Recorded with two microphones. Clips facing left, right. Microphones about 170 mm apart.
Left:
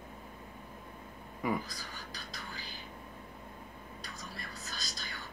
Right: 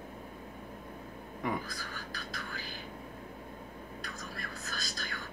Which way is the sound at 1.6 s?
50° right (ahead or behind).